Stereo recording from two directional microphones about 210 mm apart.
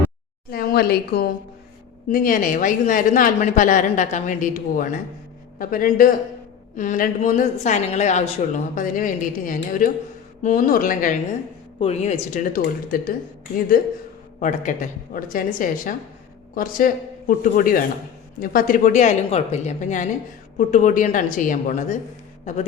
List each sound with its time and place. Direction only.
0.5 s a woman's voice: 45° left (ahead or behind)
14.3 s a woman's voice: 35° left (ahead or behind)